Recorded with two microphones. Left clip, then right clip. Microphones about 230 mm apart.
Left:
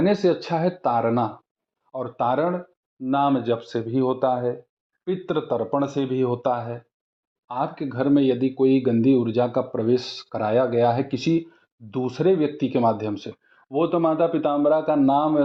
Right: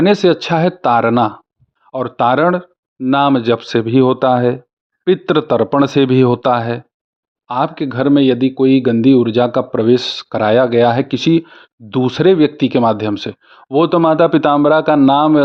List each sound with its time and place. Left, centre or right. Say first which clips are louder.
0.0 s speech: right 9 dB; right